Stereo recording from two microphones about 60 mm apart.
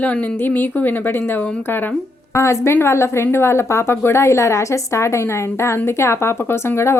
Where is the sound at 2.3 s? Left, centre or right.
Left.